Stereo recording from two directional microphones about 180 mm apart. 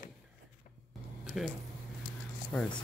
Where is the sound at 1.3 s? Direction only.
Centre (ahead or behind).